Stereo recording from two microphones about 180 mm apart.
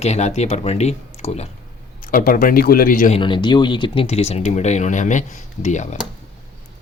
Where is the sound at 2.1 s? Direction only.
50° left (ahead or behind).